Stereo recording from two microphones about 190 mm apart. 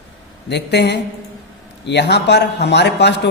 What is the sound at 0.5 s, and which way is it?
A man's voice, 60° left (ahead or behind).